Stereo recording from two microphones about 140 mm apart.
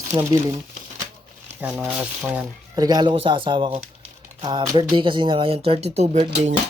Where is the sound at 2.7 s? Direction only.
25° right (ahead or behind); by 6.5 s 50° right (ahead or behind).